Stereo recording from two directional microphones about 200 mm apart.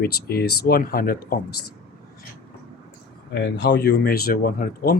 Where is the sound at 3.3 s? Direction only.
60° left (ahead or behind).